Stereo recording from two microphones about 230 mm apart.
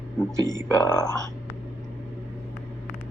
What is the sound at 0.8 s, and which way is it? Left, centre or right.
Speech, centre.